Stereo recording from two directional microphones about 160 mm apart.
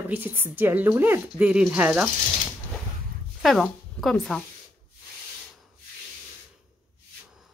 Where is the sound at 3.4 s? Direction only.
Centre (ahead or behind).